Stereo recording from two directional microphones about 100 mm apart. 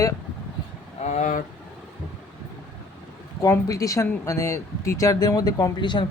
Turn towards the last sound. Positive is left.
turn(degrees=50)  # may be behind; listen again after turning